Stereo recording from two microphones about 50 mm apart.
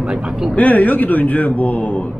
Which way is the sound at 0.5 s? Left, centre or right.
Left.